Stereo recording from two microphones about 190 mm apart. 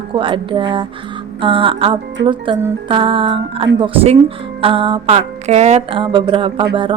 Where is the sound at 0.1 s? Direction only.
25° right (ahead or behind).